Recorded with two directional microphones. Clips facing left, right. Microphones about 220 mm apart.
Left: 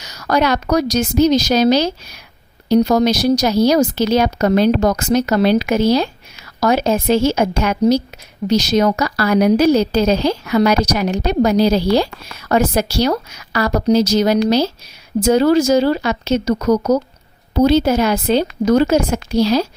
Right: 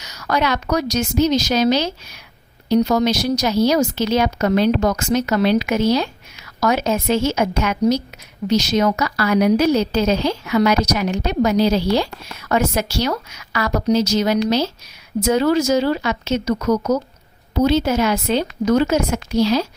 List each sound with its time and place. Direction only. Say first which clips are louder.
0.0 s a woman's voice: left 4 dB; 35° left (ahead or behind)